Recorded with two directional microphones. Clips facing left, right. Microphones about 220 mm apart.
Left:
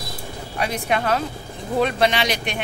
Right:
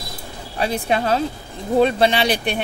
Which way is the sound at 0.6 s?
30° right (ahead or behind).